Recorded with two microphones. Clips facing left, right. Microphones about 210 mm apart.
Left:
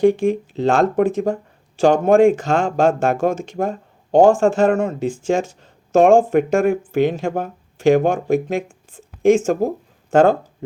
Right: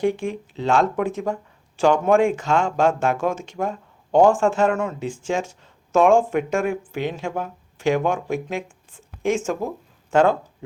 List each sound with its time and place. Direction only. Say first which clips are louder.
0.0 s speech: left 8 dB; 40° left (ahead or behind)
5.9 s speech: left 4 dB; 55° left (ahead or behind)
6.1 s speech: left 5 dB; 40° left (ahead or behind)